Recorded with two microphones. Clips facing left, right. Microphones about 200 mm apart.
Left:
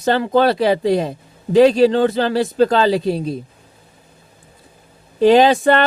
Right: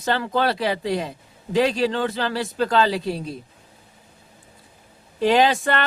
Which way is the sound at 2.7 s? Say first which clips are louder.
Left 5 dB; 25° left (ahead or behind).